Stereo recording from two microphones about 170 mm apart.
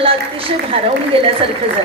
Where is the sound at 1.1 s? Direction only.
35° right (ahead or behind).